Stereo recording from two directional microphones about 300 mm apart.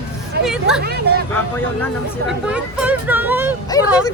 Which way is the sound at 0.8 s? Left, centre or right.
Right.